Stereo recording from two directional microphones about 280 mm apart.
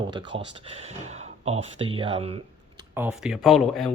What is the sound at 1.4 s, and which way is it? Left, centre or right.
Speech, right.